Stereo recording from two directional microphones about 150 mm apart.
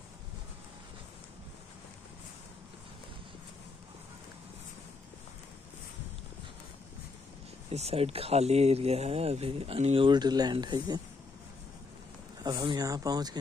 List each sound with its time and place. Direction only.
7.7 s speech: 40° right (ahead or behind)
12.4 s speech: 25° right (ahead or behind)